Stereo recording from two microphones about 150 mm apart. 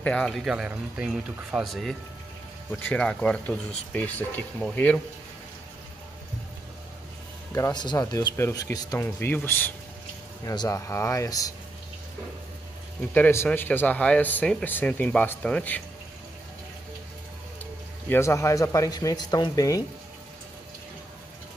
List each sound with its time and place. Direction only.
0.0 s speech: 5° left (ahead or behind)
7.5 s speech: 25° left (ahead or behind)
10.4 s speech: 25° left (ahead or behind)
13.1 s speech: 15° left (ahead or behind)
18.0 s speech: 15° left (ahead or behind)